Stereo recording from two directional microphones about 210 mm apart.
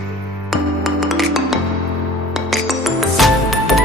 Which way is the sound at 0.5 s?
Centre (ahead or behind).